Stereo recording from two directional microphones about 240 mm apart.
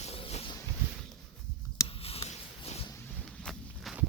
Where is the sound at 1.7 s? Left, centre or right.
Left.